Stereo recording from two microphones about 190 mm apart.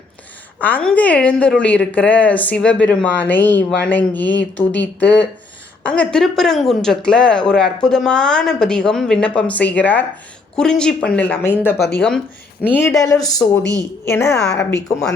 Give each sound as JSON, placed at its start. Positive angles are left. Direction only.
{"t": 0.6, "sound": "a woman's voice", "side_deg": 5}
{"t": 14.4, "sound": "speech", "side_deg": 65}